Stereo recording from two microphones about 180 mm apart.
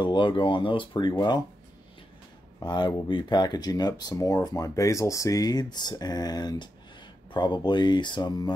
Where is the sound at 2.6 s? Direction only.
25° left (ahead or behind).